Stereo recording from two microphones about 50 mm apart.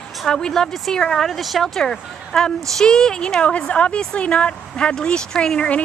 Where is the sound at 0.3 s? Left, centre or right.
Centre.